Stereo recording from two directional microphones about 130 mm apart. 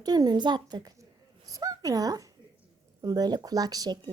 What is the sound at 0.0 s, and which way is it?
A woman's voice, 30° right (ahead or behind).